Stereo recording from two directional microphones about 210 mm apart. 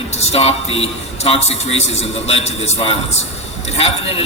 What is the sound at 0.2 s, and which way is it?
A man's voice, 30° left (ahead or behind).